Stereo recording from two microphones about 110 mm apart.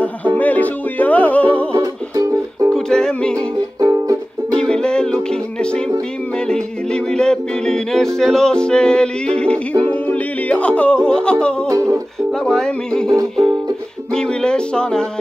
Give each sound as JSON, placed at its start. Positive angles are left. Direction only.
{"t": 0.0, "sound": "music", "side_deg": 15}
{"t": 1.8, "sound": "music", "side_deg": -30}
{"t": 2.7, "sound": "music", "side_deg": 5}
{"t": 3.3, "sound": "music", "side_deg": -35}
{"t": 4.6, "sound": "music", "side_deg": 5}
{"t": 11.7, "sound": "music", "side_deg": -25}
{"t": 12.3, "sound": "music", "side_deg": 5}
{"t": 14.1, "sound": "music", "side_deg": 5}